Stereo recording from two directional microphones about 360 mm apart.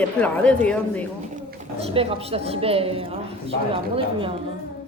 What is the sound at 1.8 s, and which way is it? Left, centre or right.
A woman's voice, centre.